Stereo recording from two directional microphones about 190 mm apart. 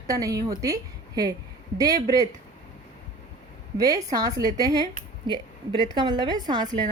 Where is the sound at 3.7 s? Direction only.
20° right (ahead or behind).